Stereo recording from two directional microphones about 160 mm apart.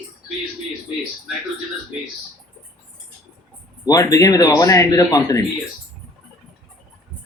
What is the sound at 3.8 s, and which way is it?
Speech, 20° left (ahead or behind).